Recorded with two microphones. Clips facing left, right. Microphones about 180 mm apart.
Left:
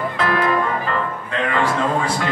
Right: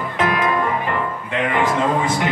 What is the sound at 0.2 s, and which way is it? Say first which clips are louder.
Music: right 1 dB; 15° right (ahead or behind).